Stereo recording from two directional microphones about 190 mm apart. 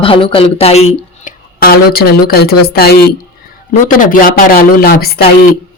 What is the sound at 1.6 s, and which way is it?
Speech, 55° left (ahead or behind).